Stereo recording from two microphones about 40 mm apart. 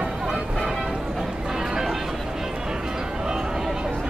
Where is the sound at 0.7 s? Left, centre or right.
Centre.